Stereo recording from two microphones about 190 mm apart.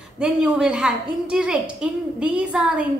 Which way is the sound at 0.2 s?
5° right (ahead or behind).